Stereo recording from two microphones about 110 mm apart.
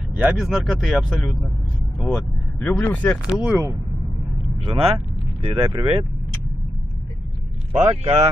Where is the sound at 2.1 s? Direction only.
10° left (ahead or behind).